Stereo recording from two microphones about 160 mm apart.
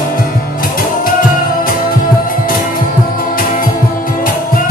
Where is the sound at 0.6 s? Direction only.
65° left (ahead or behind).